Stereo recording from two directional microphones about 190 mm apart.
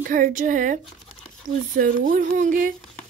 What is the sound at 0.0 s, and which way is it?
A child's voice, 45° right (ahead or behind).